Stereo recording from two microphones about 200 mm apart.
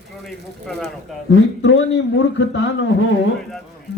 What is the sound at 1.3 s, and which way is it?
Speech, 65° left (ahead or behind).